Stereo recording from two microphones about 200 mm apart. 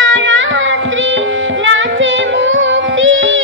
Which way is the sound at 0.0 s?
70° right (ahead or behind).